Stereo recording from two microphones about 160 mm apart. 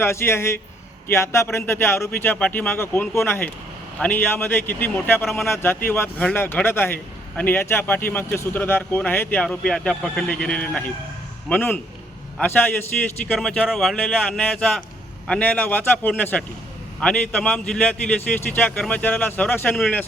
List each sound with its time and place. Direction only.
0.0 s speech: 15° left (ahead or behind)